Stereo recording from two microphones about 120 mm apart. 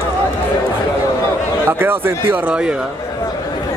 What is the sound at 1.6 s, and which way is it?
Speech, 20° right (ahead or behind).